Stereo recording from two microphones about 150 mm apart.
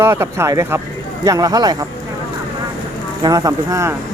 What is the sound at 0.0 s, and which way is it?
Speech, 15° right (ahead or behind).